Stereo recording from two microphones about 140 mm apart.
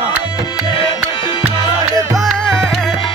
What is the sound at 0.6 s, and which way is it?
Music, 30° left (ahead or behind).